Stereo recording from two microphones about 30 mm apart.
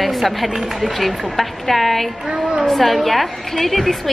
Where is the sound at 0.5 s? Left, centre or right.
Centre.